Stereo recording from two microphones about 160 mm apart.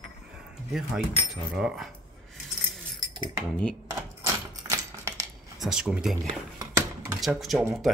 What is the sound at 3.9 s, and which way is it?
Typewriter, 15° right (ahead or behind).